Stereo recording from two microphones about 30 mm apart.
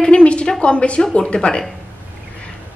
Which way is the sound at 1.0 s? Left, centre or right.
Left.